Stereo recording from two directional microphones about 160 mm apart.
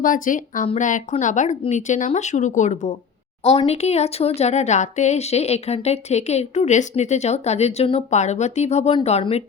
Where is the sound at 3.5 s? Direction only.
40° left (ahead or behind).